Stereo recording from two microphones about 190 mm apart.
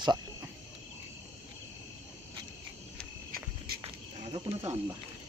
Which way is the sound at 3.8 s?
30° right (ahead or behind).